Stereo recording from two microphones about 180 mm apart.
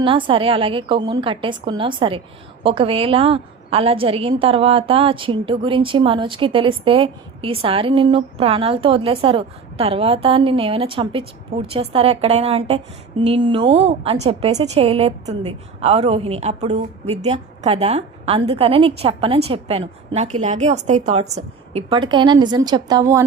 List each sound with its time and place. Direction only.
0.0 s a woman's voice: 30° right (ahead or behind)